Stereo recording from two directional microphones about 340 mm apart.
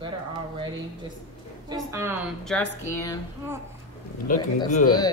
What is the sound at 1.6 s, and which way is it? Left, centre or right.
Speech, centre.